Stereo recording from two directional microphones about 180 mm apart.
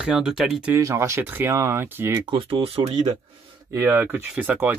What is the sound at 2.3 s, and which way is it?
Speech, 30° right (ahead or behind).